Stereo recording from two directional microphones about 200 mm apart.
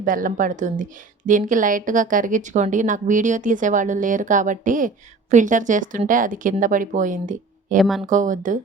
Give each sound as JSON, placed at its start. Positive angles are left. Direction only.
{"t": 0.0, "sound": "speech", "side_deg": -45}
{"t": 7.8, "sound": "speech", "side_deg": 0}
{"t": 8.0, "sound": "speech", "side_deg": -40}